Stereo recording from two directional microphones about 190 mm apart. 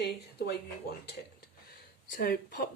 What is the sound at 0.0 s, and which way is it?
Speech, 60° left (ahead or behind).